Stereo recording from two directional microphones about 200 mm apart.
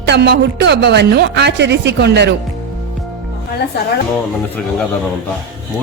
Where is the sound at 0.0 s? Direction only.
55° right (ahead or behind).